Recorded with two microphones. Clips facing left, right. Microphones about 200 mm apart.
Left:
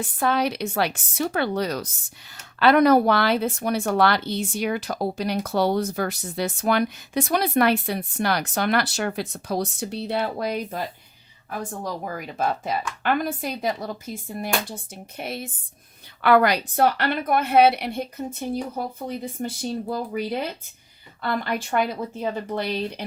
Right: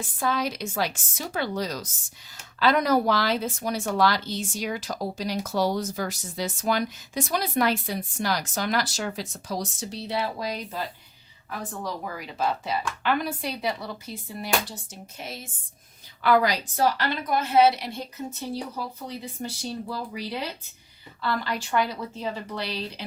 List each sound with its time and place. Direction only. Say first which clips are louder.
0.0 s speech: left 4 dB; 60° left (ahead or behind)
12.1 s speech: left 2 dB; 50° left (ahead or behind)
15.2 s speech: left 7 dB; 60° left (ahead or behind)